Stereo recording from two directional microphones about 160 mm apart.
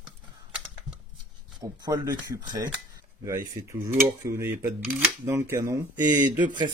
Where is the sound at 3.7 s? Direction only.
20° right (ahead or behind).